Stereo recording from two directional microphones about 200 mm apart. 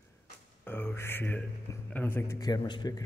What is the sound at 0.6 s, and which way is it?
Speech, 10° left (ahead or behind).